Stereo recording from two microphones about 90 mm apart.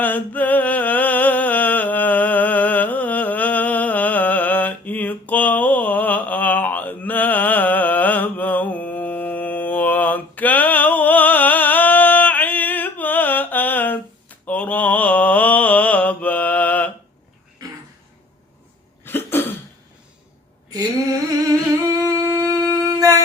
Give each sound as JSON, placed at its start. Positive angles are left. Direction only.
{"t": 0.0, "sound": "a sound", "side_deg": 20}
{"t": 19.0, "sound": "cough", "side_deg": 25}
{"t": 20.7, "sound": "humming", "side_deg": -45}